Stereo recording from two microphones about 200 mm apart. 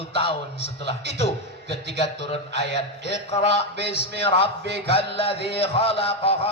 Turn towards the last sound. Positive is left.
turn(degrees=30)  # may be behind; listen again after turning